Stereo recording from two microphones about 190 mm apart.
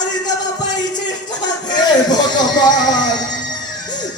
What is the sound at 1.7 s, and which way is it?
Speech, 20° left (ahead or behind).